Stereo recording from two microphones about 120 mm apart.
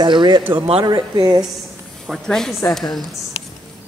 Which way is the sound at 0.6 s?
50° right (ahead or behind).